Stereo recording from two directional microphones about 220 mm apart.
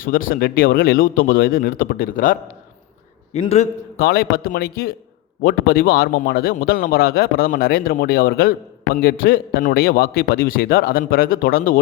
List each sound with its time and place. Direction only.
0.0 s a man's voice: 40° left (ahead or behind)
3.9 s a man's voice: 45° left (ahead or behind)